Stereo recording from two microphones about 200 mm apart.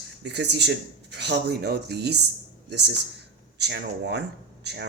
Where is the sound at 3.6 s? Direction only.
55° right (ahead or behind).